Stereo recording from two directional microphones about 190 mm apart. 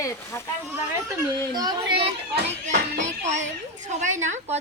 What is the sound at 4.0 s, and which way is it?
Speech, 40° right (ahead or behind).